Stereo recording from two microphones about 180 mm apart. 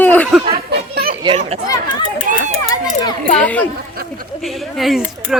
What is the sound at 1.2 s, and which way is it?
Speech, 30° right (ahead or behind).